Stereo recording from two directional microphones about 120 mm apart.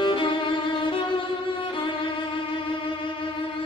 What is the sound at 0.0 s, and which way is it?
Violin, 45° left (ahead or behind).